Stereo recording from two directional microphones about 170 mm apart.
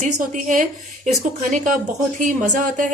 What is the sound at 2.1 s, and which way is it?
Speech, 50° right (ahead or behind).